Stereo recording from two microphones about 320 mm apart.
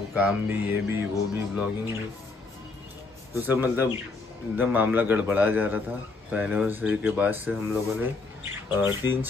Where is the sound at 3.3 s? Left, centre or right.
Centre.